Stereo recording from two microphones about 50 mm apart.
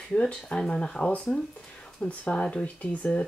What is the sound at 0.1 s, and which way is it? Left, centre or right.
Speech, centre.